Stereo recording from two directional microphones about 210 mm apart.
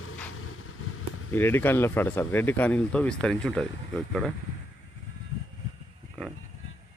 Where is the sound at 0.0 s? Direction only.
90° left.